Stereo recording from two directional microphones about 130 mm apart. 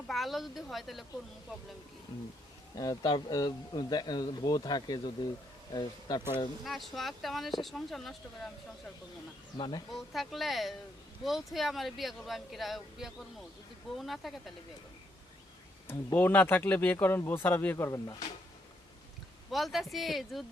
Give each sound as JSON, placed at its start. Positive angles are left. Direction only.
{"t": 0.1, "sound": "speech", "side_deg": 0}
{"t": 2.7, "sound": "speech", "side_deg": 30}
{"t": 6.7, "sound": "speech", "side_deg": 0}
{"t": 9.6, "sound": "speech", "side_deg": 40}
{"t": 9.9, "sound": "speech", "side_deg": 0}
{"t": 16.1, "sound": "speech", "side_deg": 15}
{"t": 19.5, "sound": "speech", "side_deg": 0}